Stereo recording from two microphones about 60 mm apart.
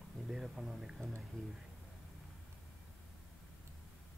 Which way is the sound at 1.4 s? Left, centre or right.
Centre.